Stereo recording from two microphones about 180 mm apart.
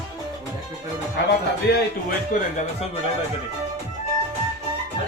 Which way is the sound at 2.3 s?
45° left (ahead or behind).